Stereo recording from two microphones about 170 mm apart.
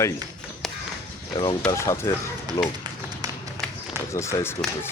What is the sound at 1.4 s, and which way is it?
Speech, 20° left (ahead or behind).